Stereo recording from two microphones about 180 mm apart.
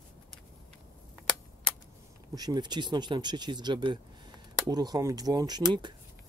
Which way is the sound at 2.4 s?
20° right (ahead or behind).